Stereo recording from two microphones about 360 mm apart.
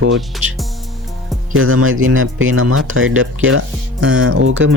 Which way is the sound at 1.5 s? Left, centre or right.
Right.